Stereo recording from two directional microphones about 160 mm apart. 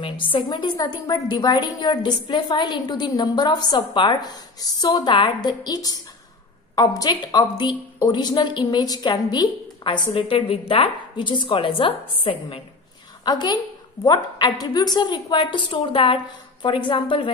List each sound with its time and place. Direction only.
0.0 s a woman's voice: 30° left (ahead or behind)